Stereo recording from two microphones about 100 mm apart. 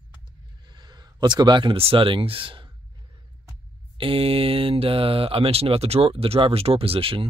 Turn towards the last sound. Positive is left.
turn(degrees=-70)  # may be behind; listen again after turning